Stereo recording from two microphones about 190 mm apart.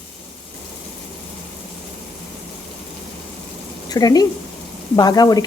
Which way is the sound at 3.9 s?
20° left (ahead or behind).